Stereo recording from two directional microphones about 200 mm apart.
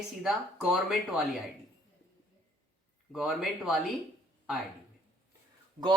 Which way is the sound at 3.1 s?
Centre (ahead or behind).